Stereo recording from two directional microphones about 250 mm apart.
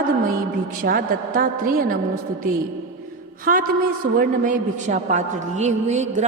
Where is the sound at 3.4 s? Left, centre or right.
Right.